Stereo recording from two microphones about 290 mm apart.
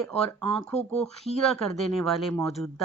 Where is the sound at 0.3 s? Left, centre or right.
Centre.